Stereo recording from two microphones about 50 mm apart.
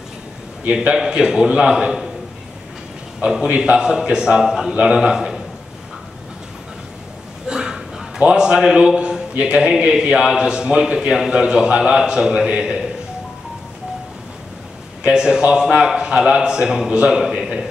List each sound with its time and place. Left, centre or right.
0.9 s a man's voice: centre
3.4 s a man's voice: right
3.7 s a man's voice: centre
7.4 s a sound: centre
8.2 s a man's voice: centre
15.0 s a man's voice: centre
17.2 s a man's voice: centre